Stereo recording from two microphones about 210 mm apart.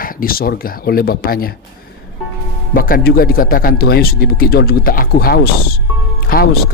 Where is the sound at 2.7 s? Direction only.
45° left (ahead or behind).